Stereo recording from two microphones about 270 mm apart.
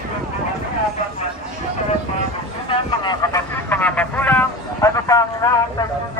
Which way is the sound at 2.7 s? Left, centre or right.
Centre.